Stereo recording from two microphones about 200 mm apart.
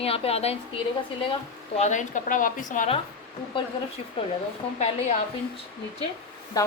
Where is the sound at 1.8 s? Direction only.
35° left (ahead or behind).